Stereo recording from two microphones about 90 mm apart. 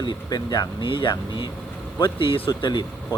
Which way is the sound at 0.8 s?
65° left (ahead or behind).